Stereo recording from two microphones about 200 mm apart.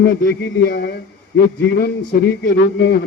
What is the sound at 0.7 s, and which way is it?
Speech, 50° left (ahead or behind).